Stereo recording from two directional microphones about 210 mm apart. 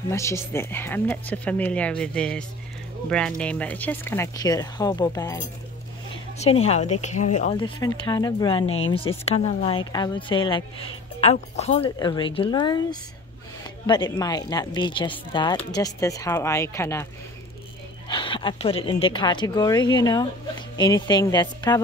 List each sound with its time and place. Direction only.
0.1 s speech: 15° left (ahead or behind)
6.4 s a woman's voice: 30° left (ahead or behind)
8.6 s speech: 70° left (ahead or behind)
8.9 s a woman's voice: 25° left (ahead or behind)
13.8 s speech: 20° left (ahead or behind)
18.0 s a woman's voice: 25° left (ahead or behind)